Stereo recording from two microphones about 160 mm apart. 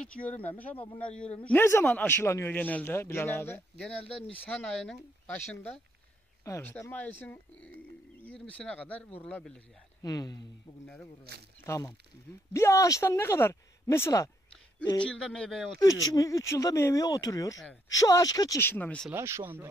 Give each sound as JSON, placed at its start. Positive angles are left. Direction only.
{"t": 0.0, "sound": "a man's voice", "side_deg": 5}
{"t": 3.7, "sound": "a man's voice", "side_deg": 5}
{"t": 10.0, "sound": "speech", "side_deg": 25}
{"t": 11.6, "sound": "a man's voice", "side_deg": 20}
{"t": 15.0, "sound": "speech", "side_deg": 5}
{"t": 15.8, "sound": "speech", "side_deg": 20}
{"t": 18.6, "sound": "a man's voice", "side_deg": 10}
{"t": 19.1, "sound": "speech", "side_deg": -15}